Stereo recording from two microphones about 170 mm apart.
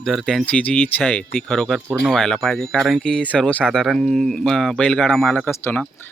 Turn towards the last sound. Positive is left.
turn(degrees=10)  # may be behind; listen again after turning